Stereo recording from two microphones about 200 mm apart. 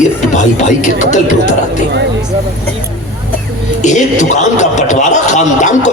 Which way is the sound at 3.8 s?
35° left (ahead or behind).